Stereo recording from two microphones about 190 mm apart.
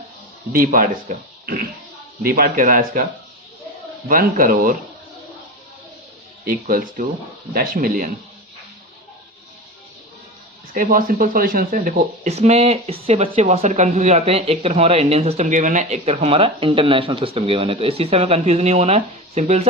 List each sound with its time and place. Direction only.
0.5 s speech: 50° right (ahead or behind)
4.1 s speech: 50° right (ahead or behind)
6.4 s speech: 50° right (ahead or behind)
10.8 s speech: 50° right (ahead or behind)